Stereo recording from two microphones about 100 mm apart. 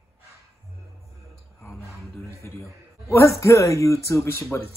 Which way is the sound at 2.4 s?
25° left (ahead or behind).